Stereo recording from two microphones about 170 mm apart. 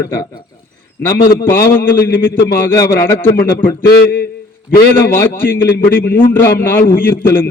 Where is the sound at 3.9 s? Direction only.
70° left (ahead or behind).